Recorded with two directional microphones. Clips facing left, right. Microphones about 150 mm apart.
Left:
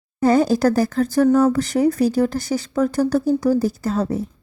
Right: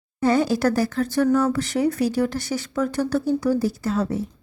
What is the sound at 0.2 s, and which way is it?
Speech, 45° left (ahead or behind).